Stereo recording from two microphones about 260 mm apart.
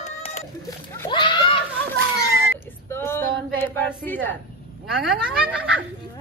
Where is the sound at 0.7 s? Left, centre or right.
Centre.